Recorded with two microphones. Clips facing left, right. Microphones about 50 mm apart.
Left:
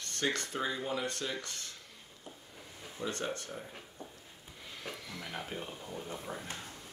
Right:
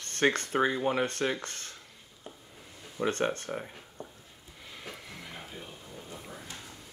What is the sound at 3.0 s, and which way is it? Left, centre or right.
Speech, right.